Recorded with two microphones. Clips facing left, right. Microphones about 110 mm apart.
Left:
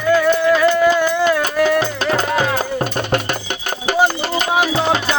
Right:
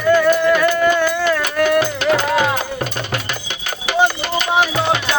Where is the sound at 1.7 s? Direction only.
35° left (ahead or behind).